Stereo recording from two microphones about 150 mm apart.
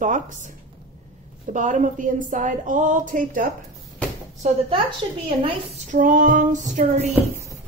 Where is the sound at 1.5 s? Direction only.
55° right (ahead or behind).